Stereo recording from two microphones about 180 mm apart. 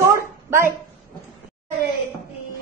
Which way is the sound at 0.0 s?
15° right (ahead or behind).